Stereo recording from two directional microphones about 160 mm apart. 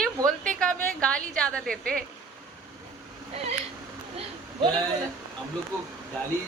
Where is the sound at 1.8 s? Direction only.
65° right (ahead or behind).